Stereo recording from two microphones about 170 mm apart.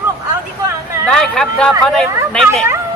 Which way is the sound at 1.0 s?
5° left (ahead or behind).